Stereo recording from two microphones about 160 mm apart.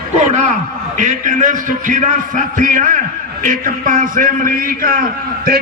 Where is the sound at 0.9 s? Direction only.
50° right (ahead or behind).